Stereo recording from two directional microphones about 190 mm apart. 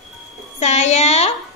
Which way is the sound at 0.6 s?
35° left (ahead or behind).